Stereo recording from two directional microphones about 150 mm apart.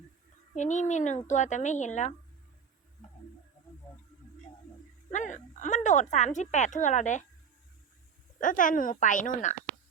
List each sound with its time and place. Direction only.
0.5 s a woman's voice: 55° left (ahead or behind)
5.1 s a woman's voice: 55° left (ahead or behind)
8.4 s speech: 60° left (ahead or behind)